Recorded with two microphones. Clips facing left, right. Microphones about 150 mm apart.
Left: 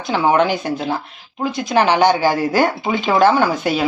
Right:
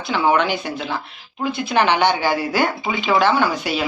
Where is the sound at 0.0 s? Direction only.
40° left (ahead or behind).